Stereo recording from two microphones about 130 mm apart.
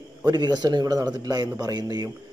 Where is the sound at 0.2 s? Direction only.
30° right (ahead or behind).